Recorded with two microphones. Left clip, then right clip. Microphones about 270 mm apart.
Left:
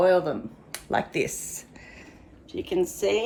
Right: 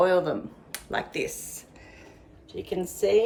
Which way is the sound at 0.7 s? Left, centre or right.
Centre.